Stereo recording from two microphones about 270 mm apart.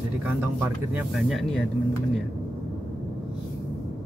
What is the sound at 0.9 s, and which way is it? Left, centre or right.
Speech, centre.